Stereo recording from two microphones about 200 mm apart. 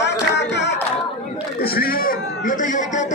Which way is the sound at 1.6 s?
50° left (ahead or behind).